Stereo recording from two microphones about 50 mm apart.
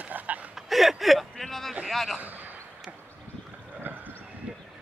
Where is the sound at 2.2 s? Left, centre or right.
Right.